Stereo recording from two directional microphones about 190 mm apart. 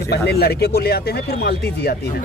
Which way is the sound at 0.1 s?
60° left (ahead or behind).